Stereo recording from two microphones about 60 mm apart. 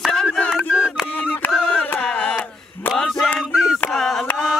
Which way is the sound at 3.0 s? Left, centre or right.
Centre.